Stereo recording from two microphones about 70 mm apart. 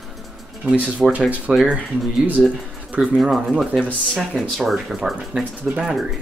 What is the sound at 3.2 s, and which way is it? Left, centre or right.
Speech, centre.